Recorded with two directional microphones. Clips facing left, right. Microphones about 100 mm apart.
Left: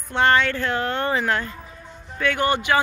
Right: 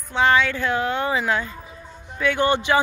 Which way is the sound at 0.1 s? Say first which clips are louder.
Even; 5° right (ahead or behind).